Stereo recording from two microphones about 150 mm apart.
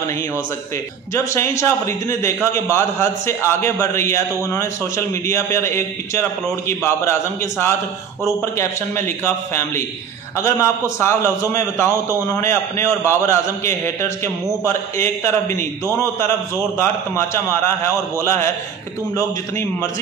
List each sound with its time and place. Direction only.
1.1 s a man's voice: 20° left (ahead or behind)